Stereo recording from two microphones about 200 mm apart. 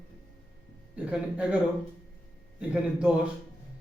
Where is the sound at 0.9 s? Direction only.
5° right (ahead or behind).